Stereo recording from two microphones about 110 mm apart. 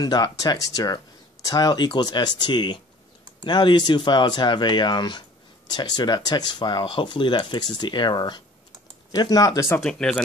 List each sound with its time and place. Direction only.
0.0 s speech: 35° left (ahead or behind)
9.8 s speech: 5° left (ahead or behind)